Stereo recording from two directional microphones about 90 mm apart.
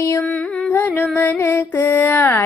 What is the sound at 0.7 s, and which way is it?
Carnatic music, 25° left (ahead or behind).